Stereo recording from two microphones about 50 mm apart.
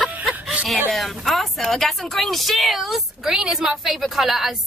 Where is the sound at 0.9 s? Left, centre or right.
Centre.